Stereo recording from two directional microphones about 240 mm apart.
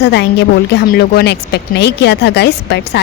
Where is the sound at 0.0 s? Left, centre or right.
Left.